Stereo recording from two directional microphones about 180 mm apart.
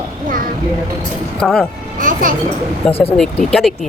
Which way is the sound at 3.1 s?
5° left (ahead or behind).